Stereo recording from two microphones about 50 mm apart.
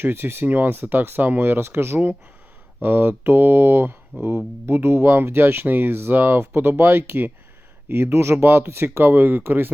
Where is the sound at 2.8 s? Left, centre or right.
Right.